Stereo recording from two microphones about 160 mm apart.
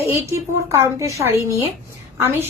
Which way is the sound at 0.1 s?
15° right (ahead or behind).